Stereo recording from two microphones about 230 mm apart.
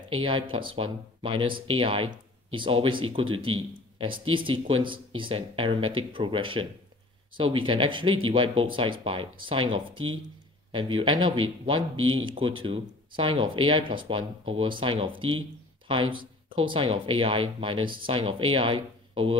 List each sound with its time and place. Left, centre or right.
0.1 s speech: right
9.9 s speech: right
10.7 s speech: right
12.0 s speech: right
12.3 s speech: right